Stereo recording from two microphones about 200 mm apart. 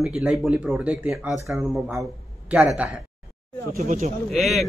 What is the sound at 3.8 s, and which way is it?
Speech, 35° right (ahead or behind).